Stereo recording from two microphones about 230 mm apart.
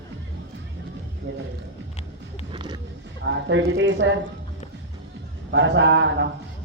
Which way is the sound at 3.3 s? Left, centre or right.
Right.